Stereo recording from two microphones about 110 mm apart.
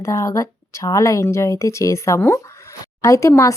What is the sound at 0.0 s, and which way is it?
Speech, 25° left (ahead or behind).